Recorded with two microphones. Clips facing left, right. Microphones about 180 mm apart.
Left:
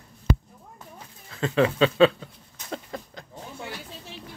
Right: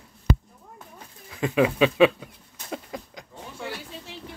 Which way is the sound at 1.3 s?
15° right (ahead or behind).